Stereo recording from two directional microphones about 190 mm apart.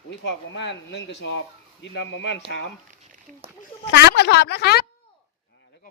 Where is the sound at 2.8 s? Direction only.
40° right (ahead or behind).